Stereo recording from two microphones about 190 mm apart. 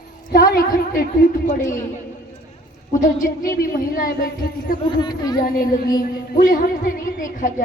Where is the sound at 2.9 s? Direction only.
45° left (ahead or behind).